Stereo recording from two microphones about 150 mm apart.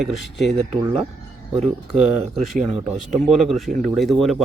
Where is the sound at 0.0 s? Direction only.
Centre (ahead or behind).